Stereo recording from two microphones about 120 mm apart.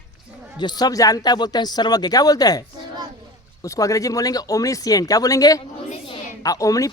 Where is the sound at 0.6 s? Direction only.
35° left (ahead or behind).